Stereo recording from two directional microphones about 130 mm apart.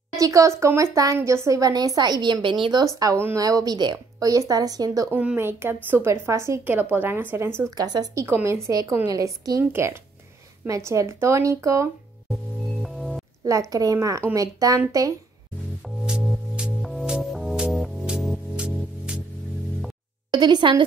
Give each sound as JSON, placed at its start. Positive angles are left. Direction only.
{"t": 0.1, "sound": "speech", "side_deg": -25}
{"t": 3.0, "sound": "speech", "side_deg": -20}
{"t": 5.1, "sound": "a woman's voice", "side_deg": -15}
{"t": 7.7, "sound": "speech", "side_deg": -30}
{"t": 12.8, "sound": "music", "side_deg": 0}
{"t": 13.4, "sound": "speech", "side_deg": -25}
{"t": 16.5, "sound": "music", "side_deg": -5}
{"t": 20.2, "sound": "a woman's voice", "side_deg": -35}